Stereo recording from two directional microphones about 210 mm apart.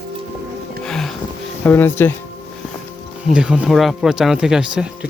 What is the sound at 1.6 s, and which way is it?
Speech, 10° left (ahead or behind).